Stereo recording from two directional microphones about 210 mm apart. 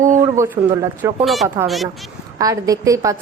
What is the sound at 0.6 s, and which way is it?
Speech, 25° right (ahead or behind).